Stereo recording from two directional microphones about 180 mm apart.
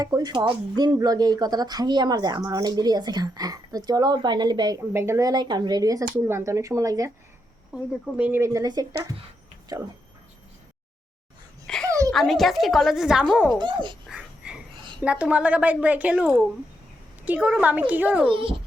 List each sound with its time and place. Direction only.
0.0 s a woman's voice: 20° right (ahead or behind)
8.2 s speech: 15° right (ahead or behind)
11.6 s babbling: 5° left (ahead or behind)
11.9 s a sound: 20° right (ahead or behind)
12.1 s a woman's voice: centre (ahead or behind)
13.6 s speech: 25° right (ahead or behind)
14.1 s a sound: 5° right (ahead or behind)
15.0 s a woman's voice: 5° right (ahead or behind)
18.3 s speech: 30° right (ahead or behind)